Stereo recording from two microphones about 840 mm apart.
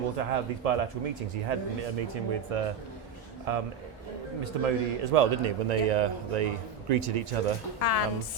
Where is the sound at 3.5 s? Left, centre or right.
Right.